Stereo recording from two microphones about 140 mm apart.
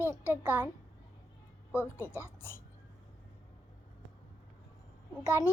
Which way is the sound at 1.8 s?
15° left (ahead or behind).